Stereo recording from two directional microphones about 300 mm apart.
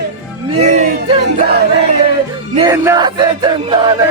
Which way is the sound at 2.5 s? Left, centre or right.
Centre.